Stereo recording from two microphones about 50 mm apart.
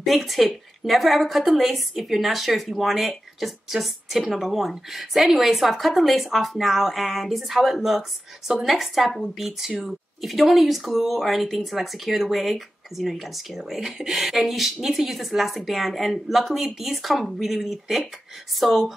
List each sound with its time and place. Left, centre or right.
0.0 s speech: centre
9.7 s speech: centre
10.2 s speech: centre